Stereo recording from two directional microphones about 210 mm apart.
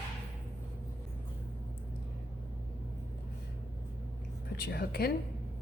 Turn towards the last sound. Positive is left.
turn(degrees=50)  # may be behind; listen again after turning